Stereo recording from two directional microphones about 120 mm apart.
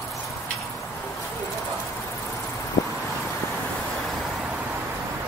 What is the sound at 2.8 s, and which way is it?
Vehicle, 30° left (ahead or behind).